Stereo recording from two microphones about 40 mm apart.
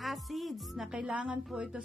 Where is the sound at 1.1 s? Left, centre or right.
Right.